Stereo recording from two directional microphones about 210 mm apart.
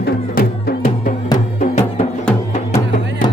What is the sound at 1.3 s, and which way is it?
Music, 35° left (ahead or behind).